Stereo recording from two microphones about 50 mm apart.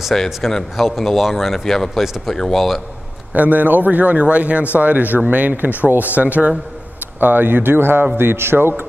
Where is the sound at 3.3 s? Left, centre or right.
Right.